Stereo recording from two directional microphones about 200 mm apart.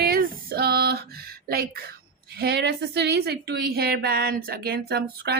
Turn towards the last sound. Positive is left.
turn(degrees=-50)  # may be behind; listen again after turning